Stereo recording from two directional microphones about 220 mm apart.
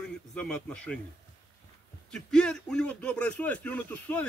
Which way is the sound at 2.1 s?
5° left (ahead or behind).